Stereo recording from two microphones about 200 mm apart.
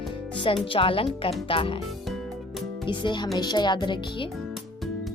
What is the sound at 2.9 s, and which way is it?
Speech, 25° left (ahead or behind).